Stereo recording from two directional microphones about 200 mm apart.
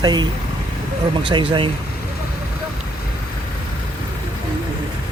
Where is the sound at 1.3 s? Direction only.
25° right (ahead or behind).